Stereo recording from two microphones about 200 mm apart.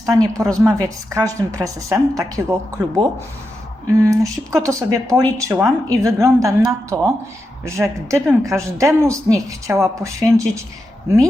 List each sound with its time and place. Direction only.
0.0 s speech: 15° right (ahead or behind)